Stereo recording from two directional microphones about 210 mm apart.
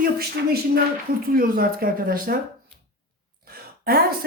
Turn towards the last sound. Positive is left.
turn(degrees=-45)  # may be behind; listen again after turning